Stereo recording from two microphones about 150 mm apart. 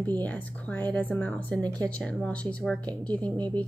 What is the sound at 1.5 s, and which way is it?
Speech, 25° right (ahead or behind).